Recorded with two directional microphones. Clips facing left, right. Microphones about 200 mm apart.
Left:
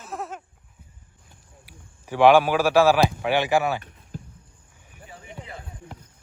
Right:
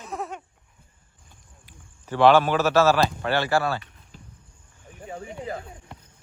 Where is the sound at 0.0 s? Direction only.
Centre (ahead or behind).